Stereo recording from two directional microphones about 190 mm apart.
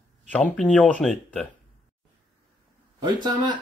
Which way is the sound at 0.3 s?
5° left (ahead or behind).